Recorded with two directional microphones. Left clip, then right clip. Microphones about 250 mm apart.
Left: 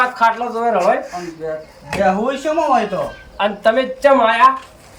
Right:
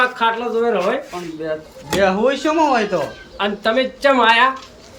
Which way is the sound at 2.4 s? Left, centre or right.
Centre.